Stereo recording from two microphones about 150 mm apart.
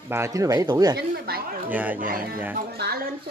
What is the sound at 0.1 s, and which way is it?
Speech, 20° right (ahead or behind).